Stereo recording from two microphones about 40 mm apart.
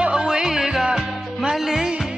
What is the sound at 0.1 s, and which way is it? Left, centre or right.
Music, centre.